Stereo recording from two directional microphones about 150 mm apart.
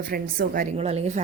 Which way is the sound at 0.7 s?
45° right (ahead or behind).